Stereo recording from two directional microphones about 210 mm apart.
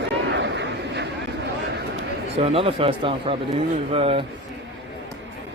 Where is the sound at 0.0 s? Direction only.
55° right (ahead or behind).